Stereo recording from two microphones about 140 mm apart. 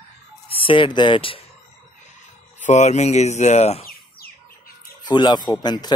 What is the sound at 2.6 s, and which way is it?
Speech, 55° left (ahead or behind).